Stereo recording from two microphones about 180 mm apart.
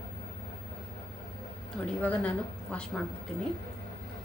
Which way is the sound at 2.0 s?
10° left (ahead or behind).